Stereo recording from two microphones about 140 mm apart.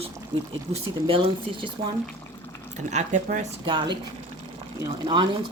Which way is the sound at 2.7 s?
60° right (ahead or behind).